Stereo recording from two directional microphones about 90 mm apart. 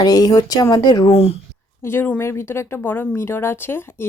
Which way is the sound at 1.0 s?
90° left.